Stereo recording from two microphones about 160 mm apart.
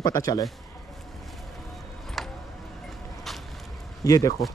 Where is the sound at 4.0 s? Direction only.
20° left (ahead or behind).